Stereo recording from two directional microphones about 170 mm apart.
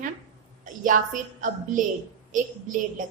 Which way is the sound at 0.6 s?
50° right (ahead or behind).